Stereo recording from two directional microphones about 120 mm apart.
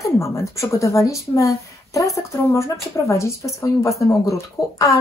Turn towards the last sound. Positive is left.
turn(degrees=25)  # may be behind; listen again after turning